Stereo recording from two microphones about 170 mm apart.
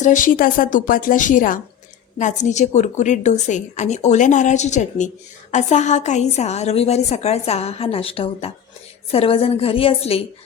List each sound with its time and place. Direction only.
0.0 s a woman's voice: 50° left (ahead or behind)